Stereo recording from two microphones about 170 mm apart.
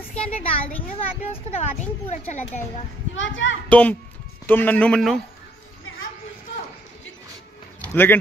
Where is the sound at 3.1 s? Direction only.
90° left.